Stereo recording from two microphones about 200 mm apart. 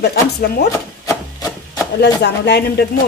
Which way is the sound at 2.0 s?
55° left (ahead or behind).